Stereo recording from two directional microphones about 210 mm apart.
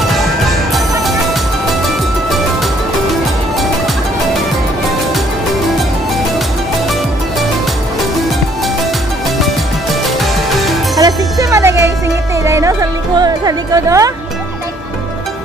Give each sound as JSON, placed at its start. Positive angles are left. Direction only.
{"t": 9.4, "sound": "music", "side_deg": 0}
{"t": 11.0, "sound": "music", "side_deg": -15}